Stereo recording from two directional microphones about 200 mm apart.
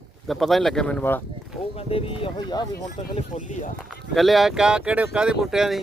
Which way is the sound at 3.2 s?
35° left (ahead or behind).